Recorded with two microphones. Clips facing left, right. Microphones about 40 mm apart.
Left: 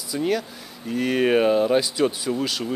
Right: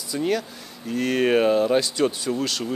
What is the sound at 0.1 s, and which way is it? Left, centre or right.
Speech, centre.